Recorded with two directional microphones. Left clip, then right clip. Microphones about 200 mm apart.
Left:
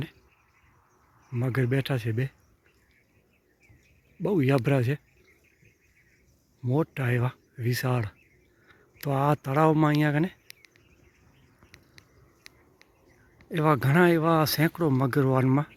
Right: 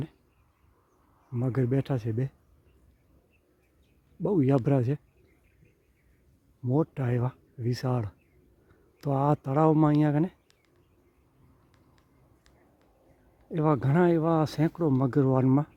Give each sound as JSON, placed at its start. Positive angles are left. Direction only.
{"t": 1.5, "sound": "speech", "side_deg": -10}
{"t": 4.2, "sound": "speech", "side_deg": -5}
{"t": 6.7, "sound": "speech", "side_deg": -10}
{"t": 11.7, "sound": "a sound", "side_deg": -10}
{"t": 13.5, "sound": "speech", "side_deg": -5}